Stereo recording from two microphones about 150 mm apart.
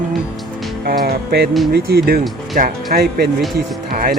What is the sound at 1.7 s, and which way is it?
Speech, 90° right.